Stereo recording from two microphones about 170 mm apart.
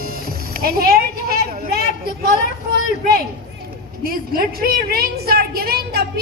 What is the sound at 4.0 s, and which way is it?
A woman's voice, 60° right (ahead or behind).